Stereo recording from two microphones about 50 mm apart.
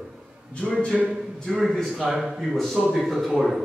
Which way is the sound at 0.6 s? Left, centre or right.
Centre.